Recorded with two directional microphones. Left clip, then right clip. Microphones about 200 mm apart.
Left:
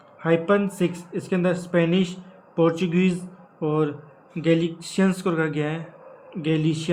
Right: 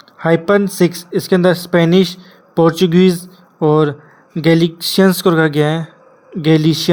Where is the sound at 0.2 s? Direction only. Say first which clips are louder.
Right 8 dB; 40° right (ahead or behind).